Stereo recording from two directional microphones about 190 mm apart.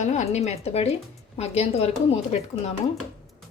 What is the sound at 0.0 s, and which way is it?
Speech, 40° left (ahead or behind).